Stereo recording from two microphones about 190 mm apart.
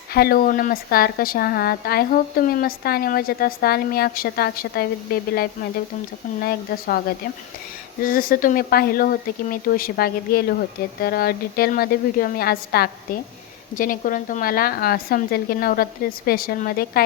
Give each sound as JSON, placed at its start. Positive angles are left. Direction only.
{"t": 0.1, "sound": "a woman's voice", "side_deg": 55}
{"t": 8.0, "sound": "a woman's voice", "side_deg": 50}